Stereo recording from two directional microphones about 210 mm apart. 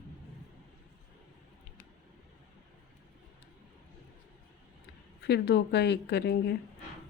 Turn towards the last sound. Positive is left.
turn(degrees=50)  # may be behind; listen again after turning